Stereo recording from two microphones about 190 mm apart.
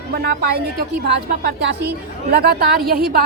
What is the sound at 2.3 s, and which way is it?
Speech, 55° right (ahead or behind).